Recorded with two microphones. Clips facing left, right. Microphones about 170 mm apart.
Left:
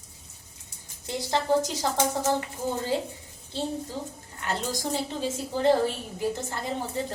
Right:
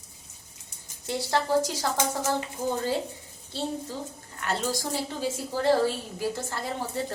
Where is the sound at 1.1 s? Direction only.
20° left (ahead or behind).